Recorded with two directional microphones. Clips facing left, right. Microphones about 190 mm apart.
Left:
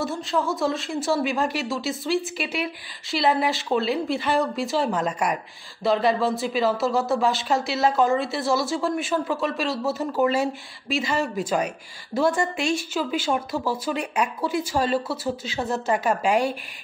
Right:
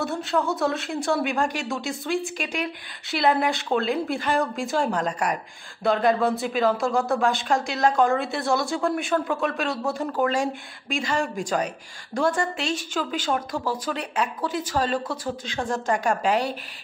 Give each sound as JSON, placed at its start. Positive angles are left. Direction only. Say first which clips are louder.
{"t": 0.0, "sound": "speech", "louder": "even", "side_deg": 0}